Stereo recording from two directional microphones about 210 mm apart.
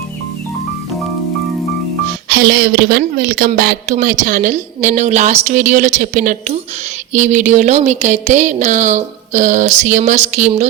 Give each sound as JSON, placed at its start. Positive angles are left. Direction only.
{"t": 2.3, "sound": "a woman's voice", "side_deg": -50}